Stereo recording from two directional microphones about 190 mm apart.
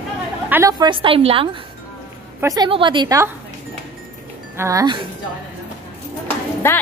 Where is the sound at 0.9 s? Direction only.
30° right (ahead or behind).